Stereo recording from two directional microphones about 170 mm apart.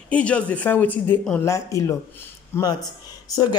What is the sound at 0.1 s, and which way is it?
Speech, 5° left (ahead or behind).